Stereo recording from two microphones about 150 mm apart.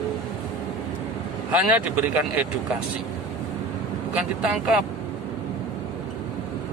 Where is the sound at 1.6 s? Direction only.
10° right (ahead or behind).